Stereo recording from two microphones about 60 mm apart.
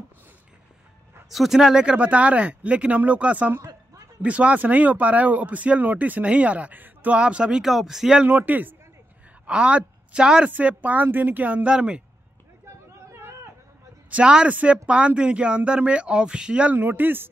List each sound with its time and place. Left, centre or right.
1.3 s speech: centre; by 3.5 s right
3.5 s a sound: right
4.2 s speech: right
7.2 s a woman's voice: centre
7.6 s speech: centre
8.3 s speech: right
9.5 s a woman's voice: centre
10.5 s speech: right
11.7 s a woman's voice: centre
13.1 s a sound: right
14.1 s a woman's voice: centre
16.7 s speech: right